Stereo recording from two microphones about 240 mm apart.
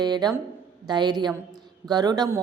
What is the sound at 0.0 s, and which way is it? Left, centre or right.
A woman's voice, centre.